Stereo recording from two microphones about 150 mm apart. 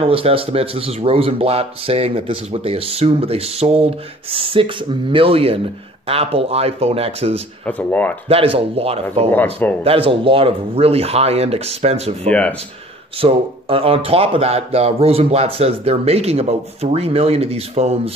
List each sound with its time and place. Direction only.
0.0 s speech: 40° right (ahead or behind)
7.6 s speech: 10° left (ahead or behind)
8.3 s speech: 40° right (ahead or behind)
9.3 s speech: 10° left (ahead or behind)
9.8 s speech: 40° right (ahead or behind)
12.3 s speech: 10° left (ahead or behind)
13.2 s speech: 40° right (ahead or behind)